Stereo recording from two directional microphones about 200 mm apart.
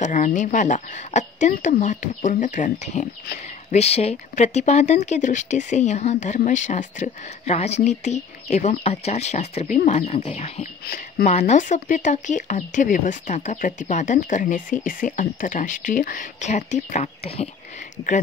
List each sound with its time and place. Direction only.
0.0 s speech: 40° left (ahead or behind)